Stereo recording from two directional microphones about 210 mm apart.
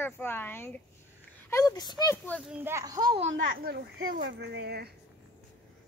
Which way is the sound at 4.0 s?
60° right (ahead or behind).